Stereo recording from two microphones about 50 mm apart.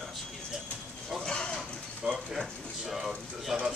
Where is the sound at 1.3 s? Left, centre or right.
Centre.